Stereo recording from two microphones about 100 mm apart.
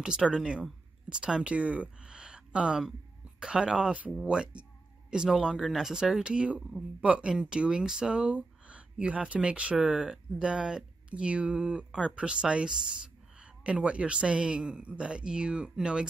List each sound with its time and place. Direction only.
0.0 s speech: 5° right (ahead or behind)